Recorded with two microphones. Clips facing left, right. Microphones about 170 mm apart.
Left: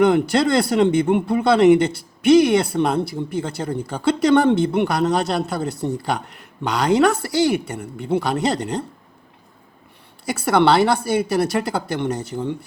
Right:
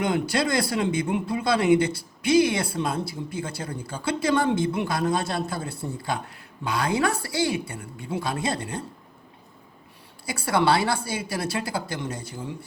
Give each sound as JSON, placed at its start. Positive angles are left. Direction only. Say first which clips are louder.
{"t": 0.0, "sound": "a woman's voice", "louder": "left 8 dB", "side_deg": 65}
{"t": 10.2, "sound": "a woman's voice", "louder": "left 6 dB", "side_deg": 65}